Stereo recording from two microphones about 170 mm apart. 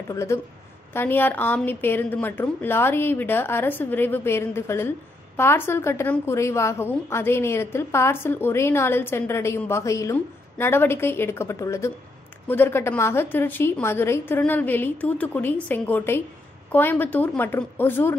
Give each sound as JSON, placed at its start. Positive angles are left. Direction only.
{"t": 0.1, "sound": "a woman's voice", "side_deg": 15}